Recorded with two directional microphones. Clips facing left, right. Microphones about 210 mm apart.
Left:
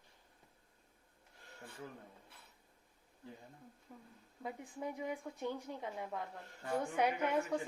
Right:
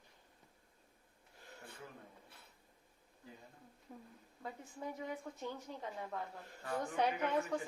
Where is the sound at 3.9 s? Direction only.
10° right (ahead or behind).